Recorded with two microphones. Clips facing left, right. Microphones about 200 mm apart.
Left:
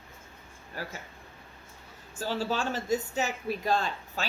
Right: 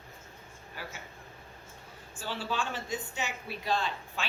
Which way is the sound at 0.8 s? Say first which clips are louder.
Left 5 dB; 40° left (ahead or behind).